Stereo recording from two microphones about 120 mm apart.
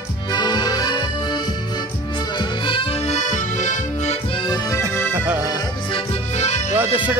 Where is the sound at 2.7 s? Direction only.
45° left (ahead or behind).